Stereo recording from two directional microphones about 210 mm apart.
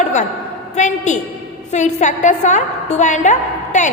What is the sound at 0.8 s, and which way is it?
A woman's voice, 35° left (ahead or behind).